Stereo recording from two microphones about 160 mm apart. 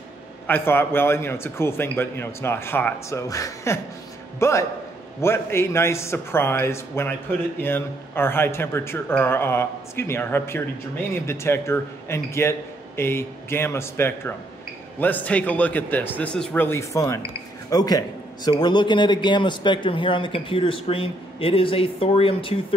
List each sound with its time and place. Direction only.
0.5 s a man's voice: 15° left (ahead or behind); by 22.8 s 35° left (ahead or behind)